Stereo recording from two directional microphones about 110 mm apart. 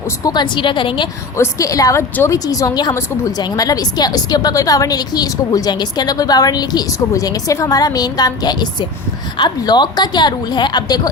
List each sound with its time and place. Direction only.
0.3 s a woman's voice: 45° left (ahead or behind)
1.4 s a woman's voice: 30° left (ahead or behind)